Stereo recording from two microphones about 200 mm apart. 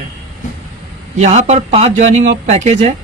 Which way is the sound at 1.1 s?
35° right (ahead or behind).